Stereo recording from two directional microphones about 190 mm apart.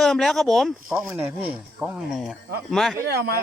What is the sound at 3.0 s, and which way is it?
Speech, 60° right (ahead or behind).